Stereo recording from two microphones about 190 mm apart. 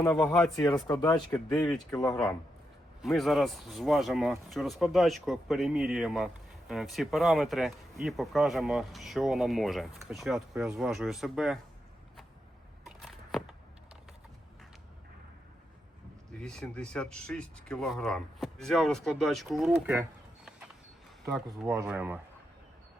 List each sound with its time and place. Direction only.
0.0 s speech: 5° left (ahead or behind)
0.5 s speech: 20° left (ahead or behind)
3.0 s speech: centre (ahead or behind)
12.8 s a sound: centre (ahead or behind)
16.4 s speech: 5° left (ahead or behind)